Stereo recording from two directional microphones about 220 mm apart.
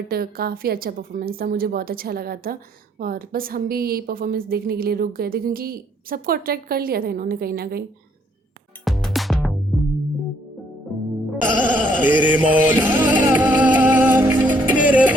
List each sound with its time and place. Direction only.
0.1 s a woman's voice: 45° right (ahead or behind)
8.8 s music: centre (ahead or behind)
11.6 s music: 5° left (ahead or behind)
12.0 s music: 5° right (ahead or behind)